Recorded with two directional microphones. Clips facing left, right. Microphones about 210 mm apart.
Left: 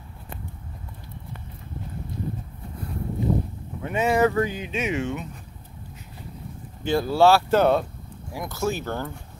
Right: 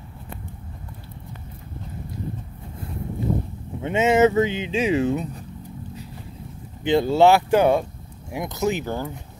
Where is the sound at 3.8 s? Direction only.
25° right (ahead or behind).